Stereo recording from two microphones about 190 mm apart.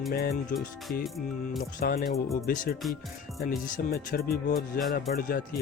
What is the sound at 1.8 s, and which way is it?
Speech, 50° left (ahead or behind).